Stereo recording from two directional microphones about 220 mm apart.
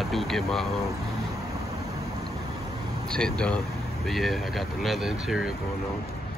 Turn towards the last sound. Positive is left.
turn(degrees=0)  # may be behind; listen again after turning